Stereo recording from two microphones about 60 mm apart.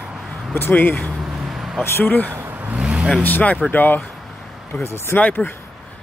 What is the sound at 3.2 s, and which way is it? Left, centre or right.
Speech, left.